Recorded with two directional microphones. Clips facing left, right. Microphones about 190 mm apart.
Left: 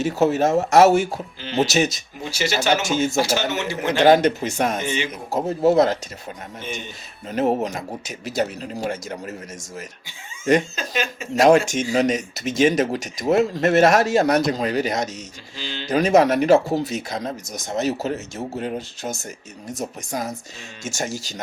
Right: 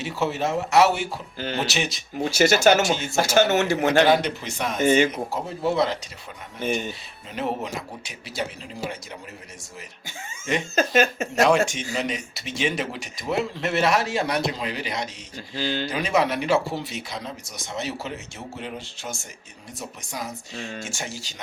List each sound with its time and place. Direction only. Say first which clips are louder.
0.0 s speech: left 7 dB; 45° left (ahead or behind)
2.4 s a man's voice: right 4 dB; 45° right (ahead or behind)
4.0 s speech: left 5 dB; 45° left (ahead or behind)
4.9 s a man's voice: right 8 dB; 45° right (ahead or behind)
5.3 s speech: left 7 dB; 45° left (ahead or behind)
7.3 s speech: left 7 dB; 45° left (ahead or behind)
10.8 s a man's voice: right 6 dB; 50° right (ahead or behind)
11.4 s speech: left 6 dB; 45° left (ahead or behind)
15.5 s a man's voice: right 7 dB; 45° right (ahead or behind)
15.9 s speech: left 9 dB; 45° left (ahead or behind)